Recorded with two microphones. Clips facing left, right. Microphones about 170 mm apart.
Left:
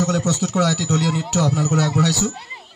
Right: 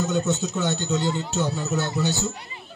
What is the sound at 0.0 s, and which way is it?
A man's voice, 85° left.